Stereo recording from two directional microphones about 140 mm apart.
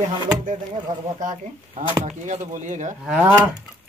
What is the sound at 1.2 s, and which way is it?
Speech, 65° right (ahead or behind).